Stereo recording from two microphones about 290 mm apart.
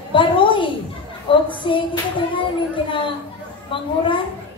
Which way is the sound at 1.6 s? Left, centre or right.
Centre.